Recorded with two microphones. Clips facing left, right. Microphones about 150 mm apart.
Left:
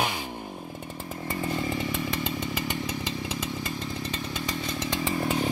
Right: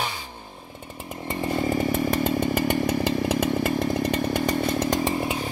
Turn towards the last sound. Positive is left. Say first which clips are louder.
# right 8 dB
turn(degrees=-50)  # may be behind; listen again after turning